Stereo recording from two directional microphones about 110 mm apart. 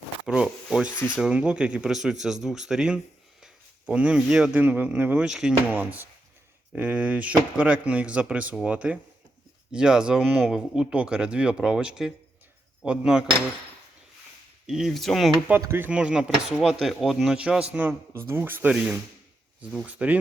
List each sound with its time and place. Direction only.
0.4 s sanding: 5° right (ahead or behind)
1.2 s speech: 10° right (ahead or behind)
3.4 s a sound: 10° right (ahead or behind)
4.5 s speech: 15° right (ahead or behind)
5.7 s speech: 15° right (ahead or behind)
14.7 s speech: 5° right (ahead or behind)
15.6 s speech: 25° right (ahead or behind)
15.9 s speech: 10° right (ahead or behind)
18.7 s speech: 5° right (ahead or behind)